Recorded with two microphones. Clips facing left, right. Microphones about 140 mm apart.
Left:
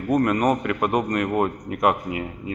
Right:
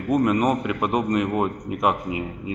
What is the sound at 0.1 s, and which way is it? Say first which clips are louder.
Speech: even; 5° right (ahead or behind).